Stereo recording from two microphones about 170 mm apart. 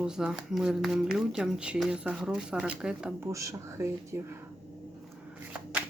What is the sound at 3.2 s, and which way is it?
Speech, 20° right (ahead or behind).